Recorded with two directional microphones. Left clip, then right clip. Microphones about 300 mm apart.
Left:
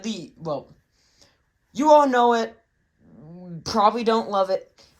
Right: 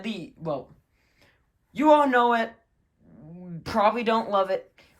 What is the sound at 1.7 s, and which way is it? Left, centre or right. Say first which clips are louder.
Speech: left 3 dB; centre.